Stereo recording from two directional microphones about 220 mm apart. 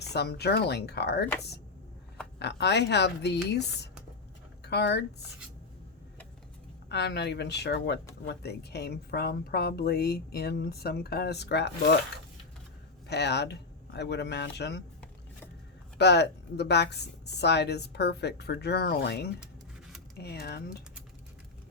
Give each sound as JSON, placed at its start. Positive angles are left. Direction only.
{"t": 0.0, "sound": "a woman's voice", "side_deg": 50}
{"t": 2.4, "sound": "a woman's voice", "side_deg": 50}
{"t": 6.8, "sound": "a woman's voice", "side_deg": 50}
{"t": 13.1, "sound": "a woman's voice", "side_deg": 50}
{"t": 16.0, "sound": "a woman's voice", "side_deg": 50}